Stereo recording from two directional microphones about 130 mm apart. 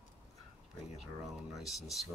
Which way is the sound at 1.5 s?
Centre (ahead or behind).